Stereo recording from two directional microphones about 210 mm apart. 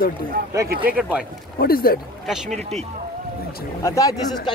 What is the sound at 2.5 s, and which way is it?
Speech, 30° right (ahead or behind).